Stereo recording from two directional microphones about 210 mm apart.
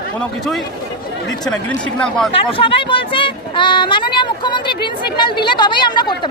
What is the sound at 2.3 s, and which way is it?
Speech, 25° left (ahead or behind).